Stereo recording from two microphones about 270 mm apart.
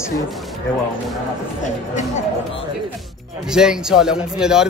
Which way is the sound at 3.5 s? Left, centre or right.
Centre.